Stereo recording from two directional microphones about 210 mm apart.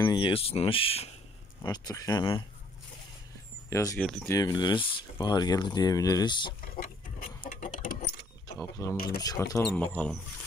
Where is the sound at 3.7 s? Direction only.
15° left (ahead or behind).